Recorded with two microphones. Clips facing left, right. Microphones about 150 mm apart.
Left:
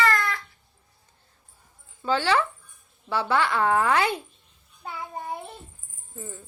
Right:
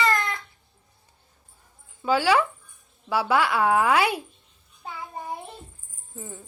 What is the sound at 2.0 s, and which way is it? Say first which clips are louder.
A woman's voice: right 2 dB; 10° right (ahead or behind).